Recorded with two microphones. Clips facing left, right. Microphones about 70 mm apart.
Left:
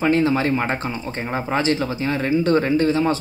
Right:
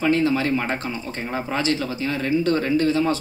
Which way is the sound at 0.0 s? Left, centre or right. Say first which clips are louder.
Left 2 dB; left.